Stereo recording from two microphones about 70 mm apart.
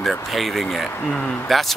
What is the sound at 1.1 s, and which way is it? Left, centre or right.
Speech, left.